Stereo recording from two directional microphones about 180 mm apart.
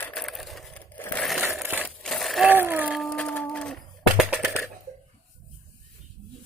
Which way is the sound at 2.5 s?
10° right (ahead or behind).